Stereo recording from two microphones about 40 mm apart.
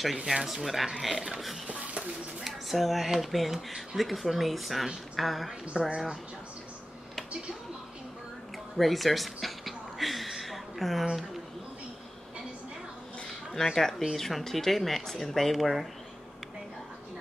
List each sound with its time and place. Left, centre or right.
0.3 s a woman's voice: centre
5.7 s speech: right
8.7 s a sound: centre
13.7 s a woman's voice: centre